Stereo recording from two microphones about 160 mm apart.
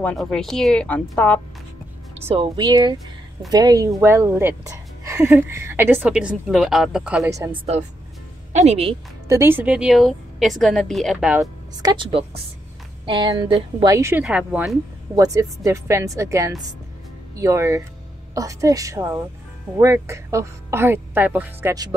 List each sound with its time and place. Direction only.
0.0 s a woman's voice: 5° left (ahead or behind)
2.1 s a woman's voice: 40° right (ahead or behind); by 7.2 s 5° right (ahead or behind)
7.2 s a woman's voice: 20° right (ahead or behind)
8.5 s speech: 40° right (ahead or behind)
9.3 s a woman's voice: 15° right (ahead or behind)
11.8 s speech: 30° right (ahead or behind)
13.9 s a woman's voice: 15° right (ahead or behind)
14.2 s a woman's voice: 5° right (ahead or behind)
15.1 s a woman's voice: 20° right (ahead or behind)